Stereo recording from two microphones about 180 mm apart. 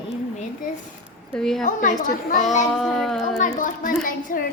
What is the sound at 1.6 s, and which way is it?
A child's voice, 45° left (ahead or behind).